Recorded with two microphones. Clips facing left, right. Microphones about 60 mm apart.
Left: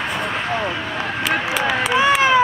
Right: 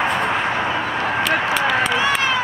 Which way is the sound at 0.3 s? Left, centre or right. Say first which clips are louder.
Right 2 dB; centre.